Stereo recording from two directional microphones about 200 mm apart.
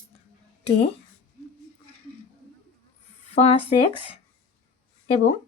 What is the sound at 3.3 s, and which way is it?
Speech, 30° left (ahead or behind).